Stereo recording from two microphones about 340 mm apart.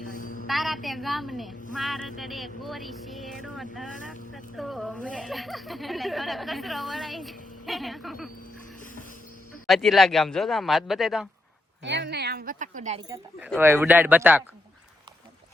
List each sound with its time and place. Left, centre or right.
0.0 s a sound: left
0.4 s speech: centre
9.6 s speech: centre
11.8 s speech: right
13.1 s speech: centre